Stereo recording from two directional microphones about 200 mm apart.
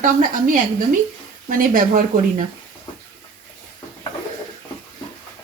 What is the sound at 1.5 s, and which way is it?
Speech, 40° right (ahead or behind).